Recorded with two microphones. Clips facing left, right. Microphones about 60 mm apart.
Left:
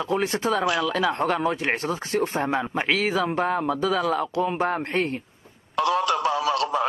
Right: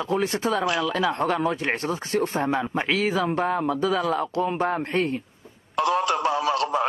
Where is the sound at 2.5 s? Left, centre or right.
Centre.